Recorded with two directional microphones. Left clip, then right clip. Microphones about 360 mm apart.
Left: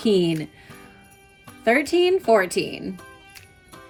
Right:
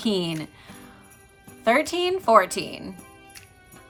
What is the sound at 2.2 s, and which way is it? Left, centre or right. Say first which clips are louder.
Speech: right 6 dB; right.